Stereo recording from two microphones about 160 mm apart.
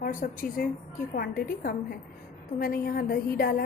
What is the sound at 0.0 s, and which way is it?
A woman's voice, 60° left (ahead or behind).